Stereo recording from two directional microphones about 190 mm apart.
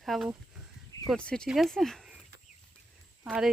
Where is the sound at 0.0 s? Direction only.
Centre (ahead or behind).